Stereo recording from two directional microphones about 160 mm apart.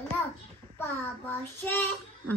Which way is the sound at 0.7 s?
15° left (ahead or behind).